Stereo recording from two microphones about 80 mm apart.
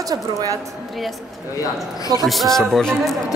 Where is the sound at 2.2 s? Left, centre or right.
Centre.